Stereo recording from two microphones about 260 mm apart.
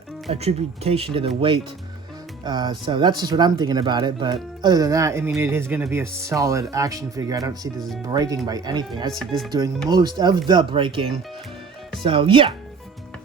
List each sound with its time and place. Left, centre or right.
0.3 s speech: right